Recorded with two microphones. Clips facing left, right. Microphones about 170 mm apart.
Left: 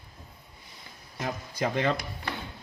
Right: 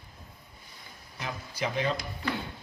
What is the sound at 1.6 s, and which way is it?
Speech, 55° left (ahead or behind).